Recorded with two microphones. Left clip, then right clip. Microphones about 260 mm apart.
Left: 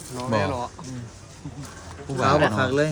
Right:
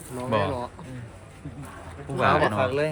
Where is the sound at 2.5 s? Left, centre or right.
Left.